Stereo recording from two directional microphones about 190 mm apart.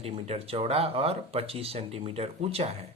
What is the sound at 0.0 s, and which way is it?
Speech, 30° right (ahead or behind).